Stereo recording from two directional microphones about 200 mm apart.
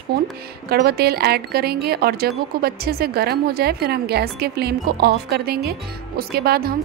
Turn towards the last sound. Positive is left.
turn(degrees=-50)  # may be behind; listen again after turning